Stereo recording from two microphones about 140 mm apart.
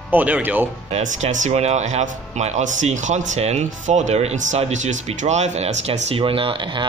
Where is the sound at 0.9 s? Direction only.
60° right (ahead or behind).